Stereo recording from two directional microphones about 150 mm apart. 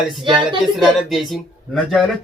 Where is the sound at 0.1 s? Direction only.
Centre (ahead or behind).